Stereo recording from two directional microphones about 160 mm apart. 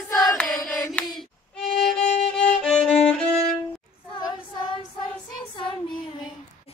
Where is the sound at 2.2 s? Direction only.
5° left (ahead or behind).